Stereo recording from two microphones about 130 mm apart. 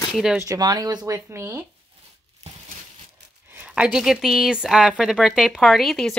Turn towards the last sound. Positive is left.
turn(degrees=0)  # may be behind; listen again after turning